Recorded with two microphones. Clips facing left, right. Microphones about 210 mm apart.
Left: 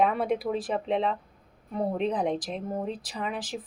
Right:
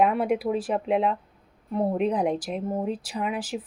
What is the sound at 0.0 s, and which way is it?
A woman's voice, 5° right (ahead or behind).